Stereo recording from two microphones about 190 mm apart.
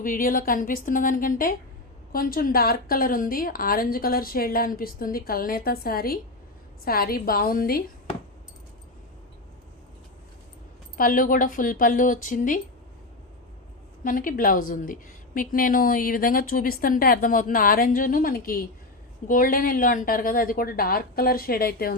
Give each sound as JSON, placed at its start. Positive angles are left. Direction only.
{"t": 0.0, "sound": "a woman's voice", "side_deg": 45}
{"t": 10.9, "sound": "a woman's voice", "side_deg": 45}
{"t": 14.0, "sound": "a woman's voice", "side_deg": 45}